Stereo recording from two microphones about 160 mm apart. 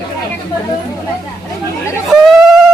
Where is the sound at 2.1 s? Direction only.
Centre (ahead or behind).